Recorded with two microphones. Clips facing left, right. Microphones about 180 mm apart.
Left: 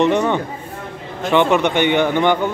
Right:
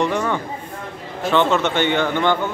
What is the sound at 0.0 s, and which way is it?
Speech, 20° left (ahead or behind).